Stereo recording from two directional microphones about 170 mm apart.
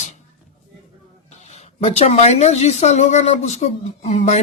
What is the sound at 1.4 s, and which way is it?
Speech, 40° left (ahead or behind).